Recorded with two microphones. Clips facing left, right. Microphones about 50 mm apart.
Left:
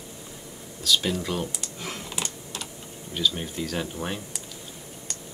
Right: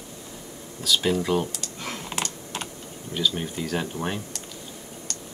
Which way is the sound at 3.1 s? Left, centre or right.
Centre.